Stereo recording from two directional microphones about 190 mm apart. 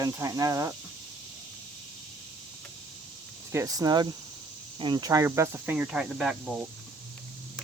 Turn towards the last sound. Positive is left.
turn(degrees=-5)  # may be behind; listen again after turning